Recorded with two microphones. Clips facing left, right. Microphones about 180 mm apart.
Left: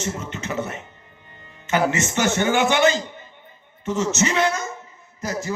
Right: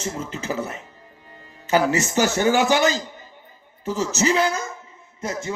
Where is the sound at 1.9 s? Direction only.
35° right (ahead or behind).